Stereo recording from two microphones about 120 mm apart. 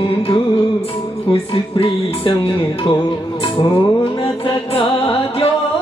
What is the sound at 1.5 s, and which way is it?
Music, 50° left (ahead or behind).